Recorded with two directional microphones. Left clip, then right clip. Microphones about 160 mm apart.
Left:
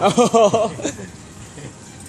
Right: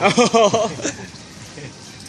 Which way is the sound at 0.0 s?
5° left (ahead or behind).